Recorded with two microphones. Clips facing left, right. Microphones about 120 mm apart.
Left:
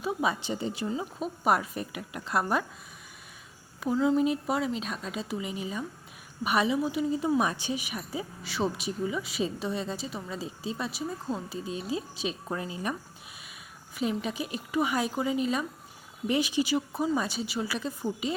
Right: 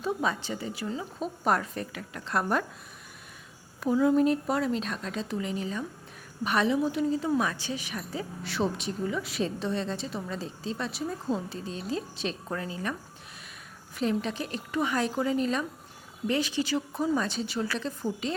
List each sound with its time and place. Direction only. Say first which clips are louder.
0.0 s a woman's voice: even; 10° left (ahead or behind)
1.2 s a woman's voice: even; 10° left (ahead or behind)
3.9 s a woman's voice: right 2 dB; 5° right (ahead or behind)